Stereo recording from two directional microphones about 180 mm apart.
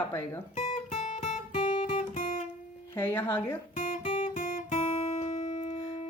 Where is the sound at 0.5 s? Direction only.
40° left (ahead or behind).